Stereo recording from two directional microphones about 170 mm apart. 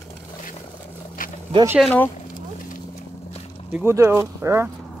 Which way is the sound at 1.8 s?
10° left (ahead or behind).